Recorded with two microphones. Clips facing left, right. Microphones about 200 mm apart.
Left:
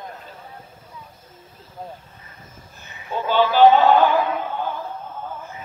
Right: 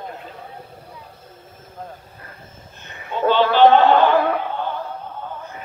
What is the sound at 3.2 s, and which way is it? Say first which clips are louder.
Speech: right 1 dB; 10° left (ahead or behind).